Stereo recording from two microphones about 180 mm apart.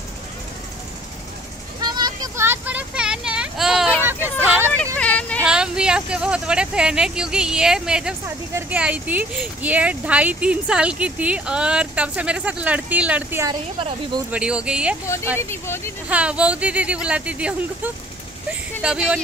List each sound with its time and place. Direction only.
1.8 s a sound: 25° right (ahead or behind); by 3.9 s centre (ahead or behind)
4.1 s vehicle: 10° right (ahead or behind)
4.9 s a sound: 10° left (ahead or behind)
5.4 s speech: 5° right (ahead or behind)
13.7 s speech: 30° right (ahead or behind)
14.3 s speech: 5° right (ahead or behind)
15.3 s speech: 15° left (ahead or behind)
16.1 s speech: 5° right (ahead or behind)